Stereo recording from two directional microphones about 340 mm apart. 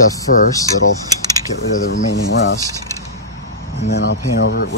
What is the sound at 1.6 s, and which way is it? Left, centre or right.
Speech, left.